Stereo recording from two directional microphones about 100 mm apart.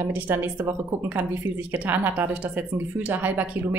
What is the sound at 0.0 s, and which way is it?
Speech, 20° right (ahead or behind).